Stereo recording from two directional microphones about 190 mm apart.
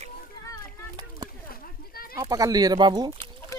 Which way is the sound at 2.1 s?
20° right (ahead or behind).